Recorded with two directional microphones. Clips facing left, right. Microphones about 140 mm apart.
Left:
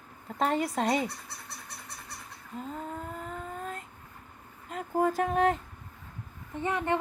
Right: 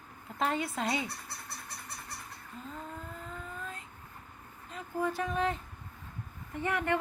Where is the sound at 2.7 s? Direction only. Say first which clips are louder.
Left 5 dB; 45° left (ahead or behind).